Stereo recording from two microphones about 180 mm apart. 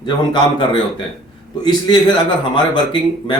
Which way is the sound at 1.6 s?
25° left (ahead or behind).